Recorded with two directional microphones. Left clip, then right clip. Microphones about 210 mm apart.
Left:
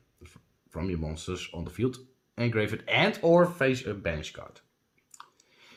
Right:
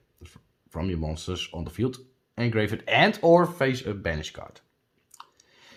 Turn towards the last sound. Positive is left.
turn(degrees=-35)  # may be behind; listen again after turning